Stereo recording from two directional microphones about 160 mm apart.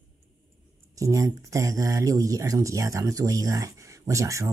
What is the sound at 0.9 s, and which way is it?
Speech, 20° right (ahead or behind).